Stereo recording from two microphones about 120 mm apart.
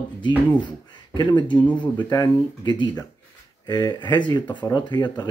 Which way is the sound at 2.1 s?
35° left (ahead or behind).